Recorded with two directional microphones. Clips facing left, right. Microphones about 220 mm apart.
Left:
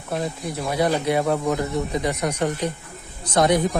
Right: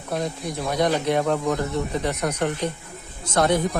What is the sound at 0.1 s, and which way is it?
Speech, centre (ahead or behind).